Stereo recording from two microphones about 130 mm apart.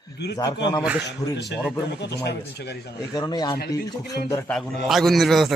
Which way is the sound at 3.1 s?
30° left (ahead or behind).